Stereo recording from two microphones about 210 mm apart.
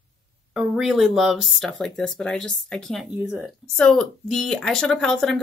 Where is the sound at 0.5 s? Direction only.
5° right (ahead or behind).